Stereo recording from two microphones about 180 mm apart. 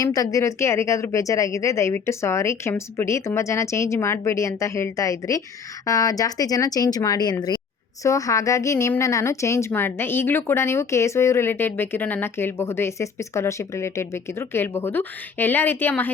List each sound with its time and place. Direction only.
0.0 s a woman's voice: 20° left (ahead or behind)